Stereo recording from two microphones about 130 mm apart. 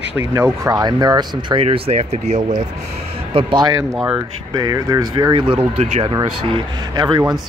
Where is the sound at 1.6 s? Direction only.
55° right (ahead or behind).